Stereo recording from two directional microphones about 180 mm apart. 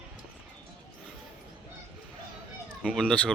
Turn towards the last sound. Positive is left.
turn(degrees=5)  # may be behind; listen again after turning